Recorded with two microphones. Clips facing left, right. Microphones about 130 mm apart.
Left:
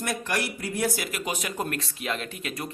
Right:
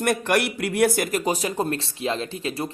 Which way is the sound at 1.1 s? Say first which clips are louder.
Right 7 dB; 40° right (ahead or behind).